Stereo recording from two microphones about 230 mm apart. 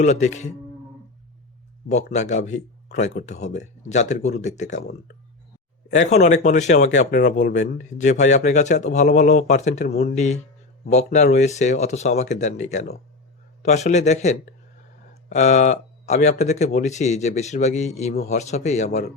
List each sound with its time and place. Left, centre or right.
0.0 s speech: left
2.1 s speech: left
6.1 s speech: left
10.8 s a man's voice: left